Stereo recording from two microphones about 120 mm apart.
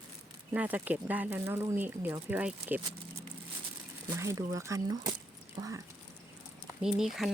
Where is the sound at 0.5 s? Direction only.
15° right (ahead or behind).